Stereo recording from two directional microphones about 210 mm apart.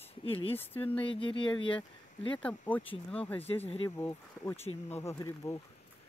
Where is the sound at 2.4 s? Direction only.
5° left (ahead or behind).